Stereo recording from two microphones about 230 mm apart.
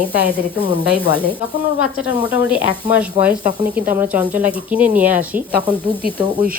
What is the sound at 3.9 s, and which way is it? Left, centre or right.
Speech, centre.